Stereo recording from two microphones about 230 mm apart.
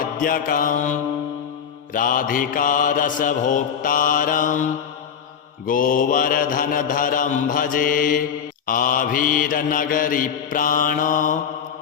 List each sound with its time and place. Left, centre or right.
0.2 s mantra: left